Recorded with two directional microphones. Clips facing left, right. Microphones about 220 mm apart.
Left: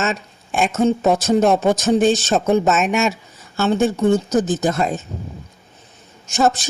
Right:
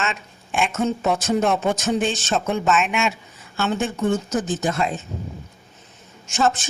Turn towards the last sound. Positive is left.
turn(degrees=40)  # may be behind; listen again after turning